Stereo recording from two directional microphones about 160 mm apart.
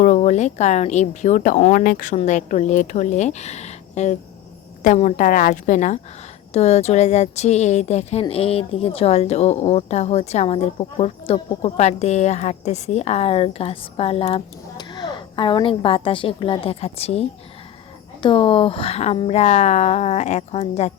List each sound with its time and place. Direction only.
0.0 s a woman's voice: 50° left (ahead or behind)